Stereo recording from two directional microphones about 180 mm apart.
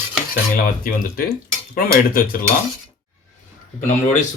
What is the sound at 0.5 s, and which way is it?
Speech, 55° left (ahead or behind).